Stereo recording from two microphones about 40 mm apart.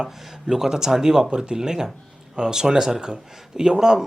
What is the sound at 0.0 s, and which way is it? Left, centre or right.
Speech, centre.